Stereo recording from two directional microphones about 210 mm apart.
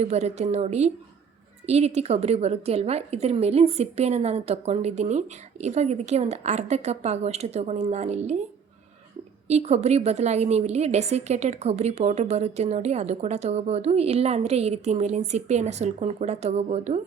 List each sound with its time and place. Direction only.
0.0 s a woman's voice: 30° right (ahead or behind)
9.5 s a woman's voice: 30° right (ahead or behind)